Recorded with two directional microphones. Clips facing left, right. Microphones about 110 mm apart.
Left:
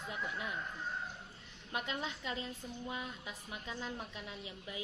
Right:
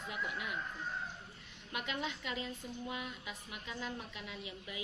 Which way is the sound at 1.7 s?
35° left (ahead or behind).